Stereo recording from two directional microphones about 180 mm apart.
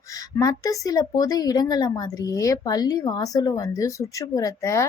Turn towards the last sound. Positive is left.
turn(degrees=15)  # may be behind; listen again after turning